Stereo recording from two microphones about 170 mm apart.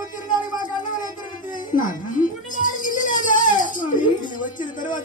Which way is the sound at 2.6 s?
50° left (ahead or behind).